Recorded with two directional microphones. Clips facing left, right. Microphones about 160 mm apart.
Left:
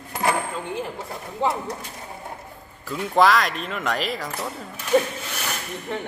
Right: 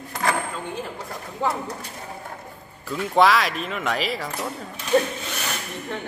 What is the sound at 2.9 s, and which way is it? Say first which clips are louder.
Speech: even; centre (ahead or behind).